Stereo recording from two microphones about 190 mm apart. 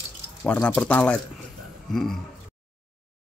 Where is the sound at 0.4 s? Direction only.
5° left (ahead or behind).